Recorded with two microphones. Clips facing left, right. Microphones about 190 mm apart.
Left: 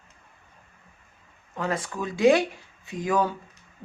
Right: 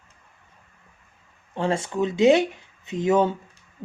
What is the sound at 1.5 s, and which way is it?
Speech, 30° right (ahead or behind).